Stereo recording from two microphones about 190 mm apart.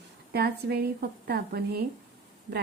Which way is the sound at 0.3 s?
55° right (ahead or behind).